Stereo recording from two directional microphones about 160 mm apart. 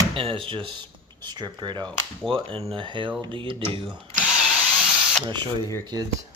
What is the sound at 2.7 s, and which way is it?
Speech, 30° right (ahead or behind).